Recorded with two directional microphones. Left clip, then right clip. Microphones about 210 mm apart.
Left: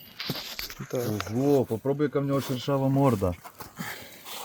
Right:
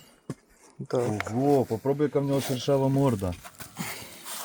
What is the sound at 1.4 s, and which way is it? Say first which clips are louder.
Speech: even; centre (ahead or behind).